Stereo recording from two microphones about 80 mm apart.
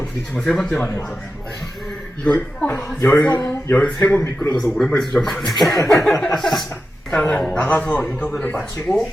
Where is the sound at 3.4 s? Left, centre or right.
Left.